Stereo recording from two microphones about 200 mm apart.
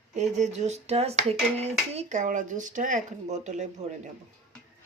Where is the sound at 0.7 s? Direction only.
35° right (ahead or behind).